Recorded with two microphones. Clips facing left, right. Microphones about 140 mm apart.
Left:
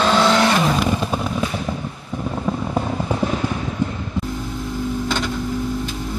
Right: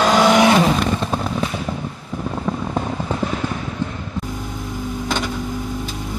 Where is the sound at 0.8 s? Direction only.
5° left (ahead or behind).